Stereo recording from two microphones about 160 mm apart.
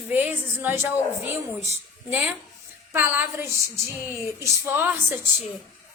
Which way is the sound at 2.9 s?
10° right (ahead or behind).